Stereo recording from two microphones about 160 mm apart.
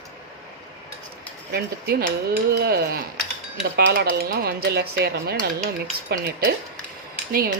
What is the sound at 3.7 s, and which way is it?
Speech, 90° right.